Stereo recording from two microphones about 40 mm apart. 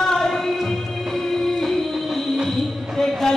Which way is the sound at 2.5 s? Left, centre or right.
Centre.